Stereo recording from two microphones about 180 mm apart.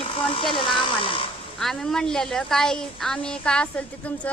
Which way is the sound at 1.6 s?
Centre (ahead or behind).